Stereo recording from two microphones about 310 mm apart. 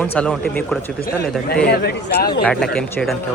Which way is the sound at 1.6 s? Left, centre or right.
Left.